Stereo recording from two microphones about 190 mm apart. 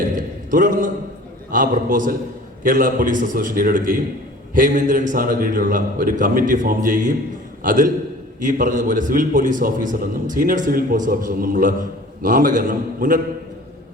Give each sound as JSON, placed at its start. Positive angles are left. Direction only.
{"t": 0.5, "sound": "a man's voice", "side_deg": -45}